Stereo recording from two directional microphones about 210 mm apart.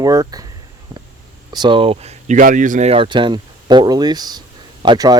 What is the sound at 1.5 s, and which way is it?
Speech, 20° right (ahead or behind).